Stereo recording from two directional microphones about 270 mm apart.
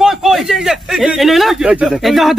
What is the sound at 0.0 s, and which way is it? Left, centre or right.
A man's voice, centre.